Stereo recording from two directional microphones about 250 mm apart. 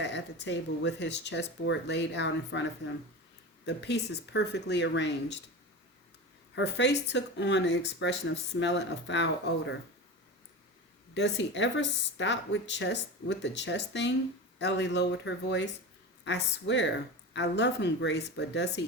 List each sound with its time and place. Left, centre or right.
0.0 s speech: left
6.6 s speech: left
11.1 s speech: left